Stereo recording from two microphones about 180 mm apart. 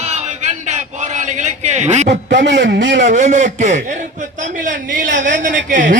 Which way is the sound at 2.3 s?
85° right.